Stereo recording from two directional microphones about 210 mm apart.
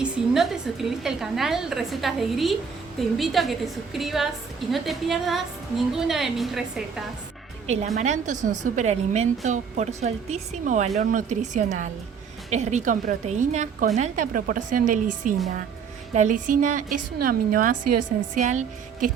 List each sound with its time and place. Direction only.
0.0 s a woman's voice: centre (ahead or behind)
7.9 s a woman's voice: 35° right (ahead or behind)